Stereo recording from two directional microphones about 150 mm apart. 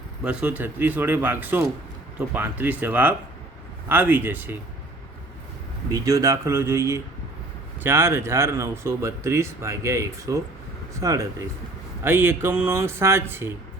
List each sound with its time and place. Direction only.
0.3 s speech: 10° right (ahead or behind)
5.9 s speech: 20° right (ahead or behind)